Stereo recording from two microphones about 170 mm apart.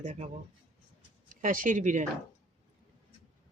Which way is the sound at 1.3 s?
50° right (ahead or behind).